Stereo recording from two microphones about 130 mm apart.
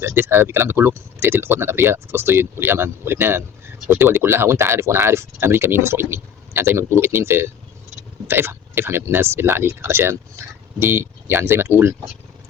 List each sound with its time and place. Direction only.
0.0 s speech: 20° right (ahead or behind)